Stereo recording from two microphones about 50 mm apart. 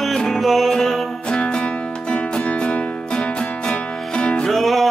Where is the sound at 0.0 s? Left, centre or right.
Centre.